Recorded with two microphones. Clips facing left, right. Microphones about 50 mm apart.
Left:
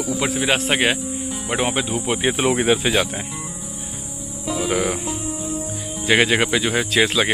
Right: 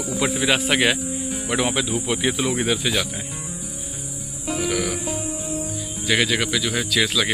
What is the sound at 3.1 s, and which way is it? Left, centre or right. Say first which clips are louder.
Music: left 2 dB; left.